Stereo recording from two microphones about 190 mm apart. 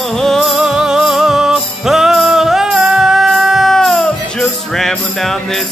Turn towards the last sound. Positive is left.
turn(degrees=0)  # may be behind; listen again after turning